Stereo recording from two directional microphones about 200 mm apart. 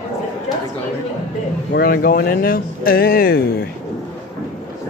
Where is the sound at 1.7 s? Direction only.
50° left (ahead or behind).